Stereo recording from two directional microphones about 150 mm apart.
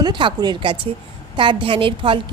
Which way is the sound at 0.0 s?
30° right (ahead or behind).